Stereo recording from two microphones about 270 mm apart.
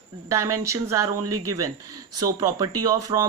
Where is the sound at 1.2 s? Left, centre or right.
Right.